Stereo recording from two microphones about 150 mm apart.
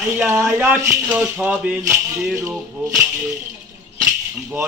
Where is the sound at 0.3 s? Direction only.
15° right (ahead or behind).